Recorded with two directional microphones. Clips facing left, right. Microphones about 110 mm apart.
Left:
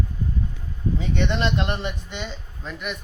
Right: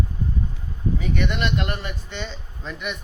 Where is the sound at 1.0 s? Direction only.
25° left (ahead or behind).